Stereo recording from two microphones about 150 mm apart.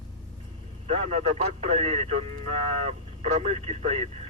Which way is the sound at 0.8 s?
45° right (ahead or behind).